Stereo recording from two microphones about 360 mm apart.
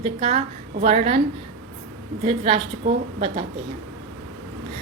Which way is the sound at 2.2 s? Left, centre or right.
Centre.